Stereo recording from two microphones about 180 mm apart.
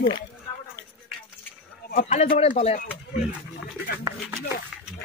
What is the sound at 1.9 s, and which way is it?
Speech, 45° left (ahead or behind).